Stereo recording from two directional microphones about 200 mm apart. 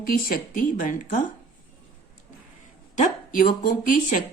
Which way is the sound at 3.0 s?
45° left (ahead or behind).